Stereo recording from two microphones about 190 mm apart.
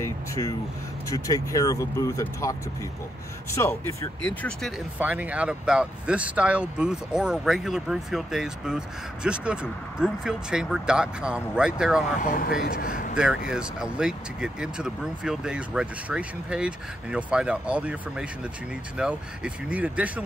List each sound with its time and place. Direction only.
0.0 s speech: 15° left (ahead or behind)
3.5 s speech: 15° left (ahead or behind); by 12.0 s 5° right (ahead or behind)
12.2 s speech: 50° left (ahead or behind)
13.1 s speech: 5° right (ahead or behind)